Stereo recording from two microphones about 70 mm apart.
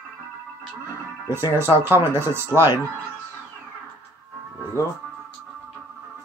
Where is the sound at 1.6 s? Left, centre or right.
Right.